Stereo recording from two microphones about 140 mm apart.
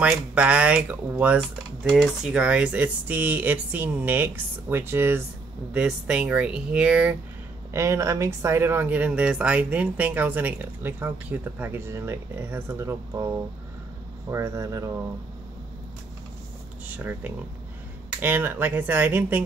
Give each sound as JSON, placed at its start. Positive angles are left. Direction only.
{"t": 0.0, "sound": "speech", "side_deg": -10}
{"t": 7.7, "sound": "speech", "side_deg": -20}
{"t": 14.3, "sound": "speech", "side_deg": -20}
{"t": 16.8, "sound": "speech", "side_deg": -10}